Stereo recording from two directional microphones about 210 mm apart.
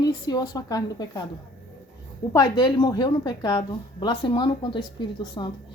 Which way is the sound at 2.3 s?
20° left (ahead or behind).